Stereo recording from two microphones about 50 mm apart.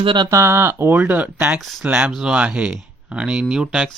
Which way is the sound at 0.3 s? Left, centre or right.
Right.